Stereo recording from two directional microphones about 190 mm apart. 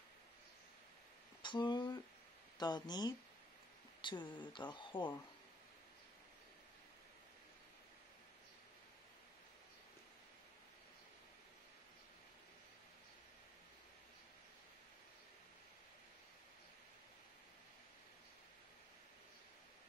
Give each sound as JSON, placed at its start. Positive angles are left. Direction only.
{"t": 1.4, "sound": "speech", "side_deg": 25}